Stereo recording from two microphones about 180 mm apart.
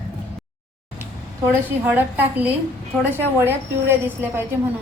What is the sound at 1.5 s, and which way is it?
Speech, 10° right (ahead or behind).